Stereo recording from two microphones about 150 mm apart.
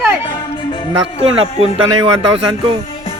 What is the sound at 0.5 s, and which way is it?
Music, 35° left (ahead or behind).